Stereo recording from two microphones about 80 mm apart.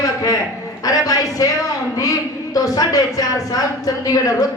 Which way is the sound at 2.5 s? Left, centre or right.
Left.